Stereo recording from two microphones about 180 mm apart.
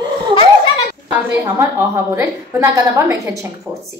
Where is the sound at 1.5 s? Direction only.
15° right (ahead or behind).